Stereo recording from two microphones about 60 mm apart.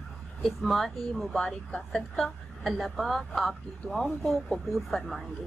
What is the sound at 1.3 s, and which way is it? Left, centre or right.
Speech, centre.